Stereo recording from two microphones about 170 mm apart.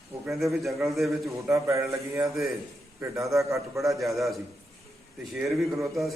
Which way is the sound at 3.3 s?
15° right (ahead or behind).